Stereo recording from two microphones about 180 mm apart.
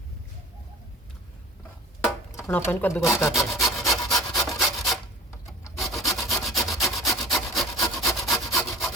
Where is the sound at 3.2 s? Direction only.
15° left (ahead or behind).